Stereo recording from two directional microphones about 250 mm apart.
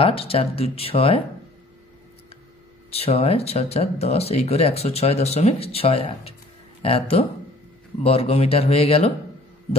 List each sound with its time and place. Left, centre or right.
0.0 s speech: left
2.9 s speech: left